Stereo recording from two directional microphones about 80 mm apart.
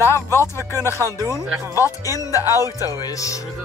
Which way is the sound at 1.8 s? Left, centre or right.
Left.